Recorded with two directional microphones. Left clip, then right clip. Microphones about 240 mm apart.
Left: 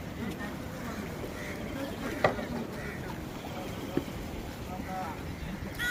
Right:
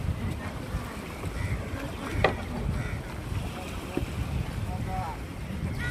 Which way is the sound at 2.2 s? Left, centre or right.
Right.